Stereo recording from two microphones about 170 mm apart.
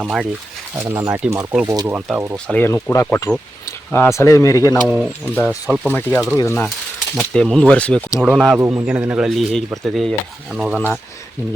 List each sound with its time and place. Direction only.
0.0 s speech: centre (ahead or behind)
0.8 s speech: 15° right (ahead or behind)
2.5 s speech: 15° left (ahead or behind)
5.5 s speech: 5° right (ahead or behind)
5.9 s speech: 10° left (ahead or behind)
7.2 s speech: centre (ahead or behind)
8.2 s speech: 5° right (ahead or behind)
10.8 s speech: 5° left (ahead or behind)